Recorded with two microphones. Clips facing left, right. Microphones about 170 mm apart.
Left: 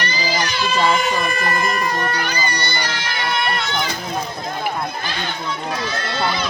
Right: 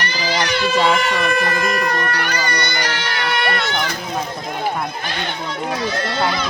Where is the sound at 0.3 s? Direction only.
70° right (ahead or behind).